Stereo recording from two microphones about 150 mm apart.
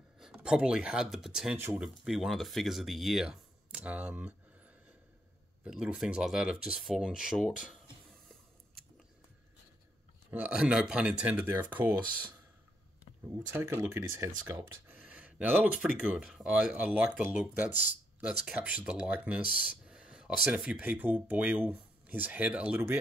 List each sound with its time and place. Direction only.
0.2 s speech: 5° right (ahead or behind)
10.3 s speech: 10° right (ahead or behind)
13.5 s speech: 15° right (ahead or behind)